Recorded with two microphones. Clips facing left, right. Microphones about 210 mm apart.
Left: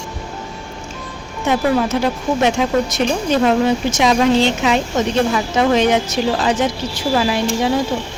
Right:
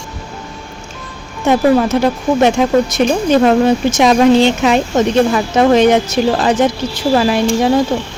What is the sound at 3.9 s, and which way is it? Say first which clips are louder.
Speech: right 5 dB; 55° right (ahead or behind).